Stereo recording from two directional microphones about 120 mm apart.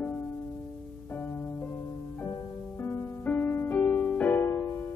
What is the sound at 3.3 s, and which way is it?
Music, 15° left (ahead or behind).